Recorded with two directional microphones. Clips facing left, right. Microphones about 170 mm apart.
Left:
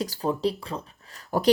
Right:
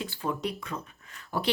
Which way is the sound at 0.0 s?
40° left (ahead or behind).